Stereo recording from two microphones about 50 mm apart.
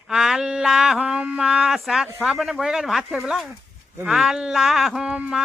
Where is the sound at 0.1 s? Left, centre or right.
Centre.